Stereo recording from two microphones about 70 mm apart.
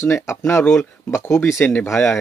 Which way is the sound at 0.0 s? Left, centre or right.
Left.